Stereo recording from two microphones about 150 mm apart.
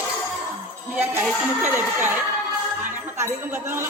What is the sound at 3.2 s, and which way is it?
Speech, 20° right (ahead or behind).